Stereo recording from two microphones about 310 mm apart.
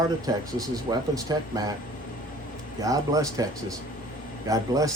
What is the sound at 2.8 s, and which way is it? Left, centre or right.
Speech, centre.